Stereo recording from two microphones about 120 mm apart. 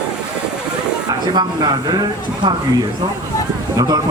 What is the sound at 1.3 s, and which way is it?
Speech, 40° right (ahead or behind).